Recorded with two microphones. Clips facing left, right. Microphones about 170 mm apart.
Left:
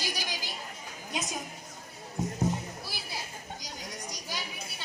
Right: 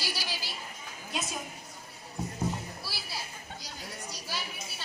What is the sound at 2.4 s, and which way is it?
Clip-clop, 20° left (ahead or behind).